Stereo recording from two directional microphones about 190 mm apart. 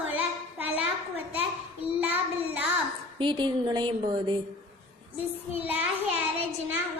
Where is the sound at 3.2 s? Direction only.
25° right (ahead or behind).